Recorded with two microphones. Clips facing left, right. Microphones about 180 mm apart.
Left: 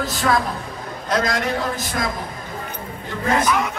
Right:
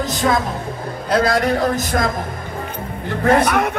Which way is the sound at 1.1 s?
30° right (ahead or behind).